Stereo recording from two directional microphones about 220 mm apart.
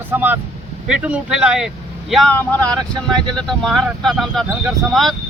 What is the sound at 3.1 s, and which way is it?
Speech, 20° right (ahead or behind).